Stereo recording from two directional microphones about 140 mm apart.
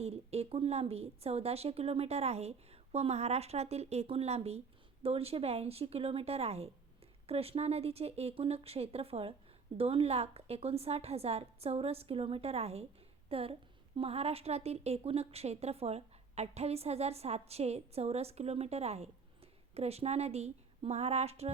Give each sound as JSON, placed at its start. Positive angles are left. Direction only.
{"t": 0.0, "sound": "a woman's voice", "side_deg": -50}